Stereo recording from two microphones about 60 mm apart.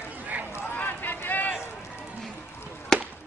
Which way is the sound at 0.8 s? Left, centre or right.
Left.